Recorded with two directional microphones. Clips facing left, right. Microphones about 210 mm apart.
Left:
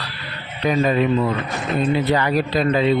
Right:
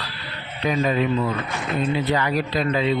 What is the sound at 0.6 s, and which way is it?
Speech, 50° left (ahead or behind).